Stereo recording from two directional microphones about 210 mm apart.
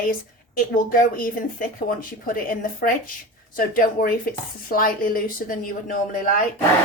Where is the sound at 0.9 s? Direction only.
40° left (ahead or behind).